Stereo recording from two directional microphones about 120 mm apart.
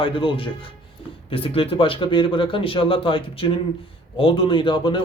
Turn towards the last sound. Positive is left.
turn(degrees=45)  # may be behind; listen again after turning